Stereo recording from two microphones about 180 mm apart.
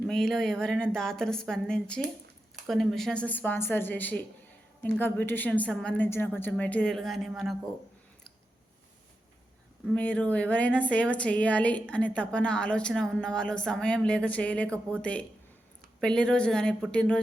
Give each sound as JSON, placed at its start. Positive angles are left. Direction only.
{"t": 0.1, "sound": "a woman's voice", "side_deg": 5}
{"t": 9.8, "sound": "a woman's voice", "side_deg": 5}